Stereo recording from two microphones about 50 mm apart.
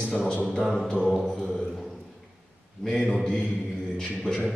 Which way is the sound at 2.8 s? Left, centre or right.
Centre.